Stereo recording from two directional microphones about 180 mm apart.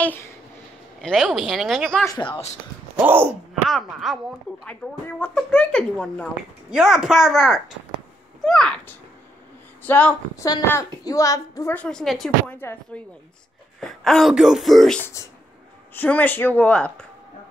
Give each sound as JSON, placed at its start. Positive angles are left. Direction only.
{"t": 0.0, "sound": "speech", "side_deg": 10}
{"t": 1.0, "sound": "speech", "side_deg": 0}
{"t": 2.0, "sound": "speech", "side_deg": 25}
{"t": 3.0, "sound": "speech", "side_deg": -10}
{"t": 3.6, "sound": "speech", "side_deg": 0}
{"t": 15.2, "sound": "speech", "side_deg": 15}